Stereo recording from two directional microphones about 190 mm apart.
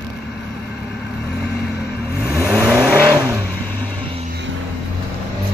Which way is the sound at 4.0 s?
30° right (ahead or behind).